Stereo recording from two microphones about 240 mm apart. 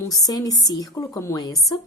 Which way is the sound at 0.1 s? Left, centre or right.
Centre.